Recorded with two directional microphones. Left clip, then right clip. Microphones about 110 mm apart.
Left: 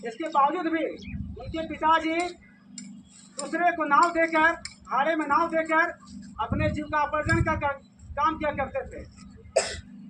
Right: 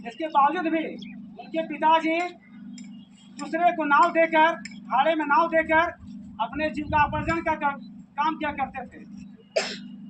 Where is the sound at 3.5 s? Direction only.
5° right (ahead or behind).